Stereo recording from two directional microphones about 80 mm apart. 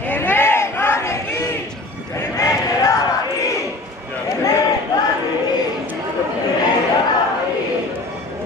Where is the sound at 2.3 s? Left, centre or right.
Left.